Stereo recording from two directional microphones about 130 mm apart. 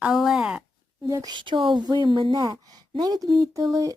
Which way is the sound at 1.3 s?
40° right (ahead or behind).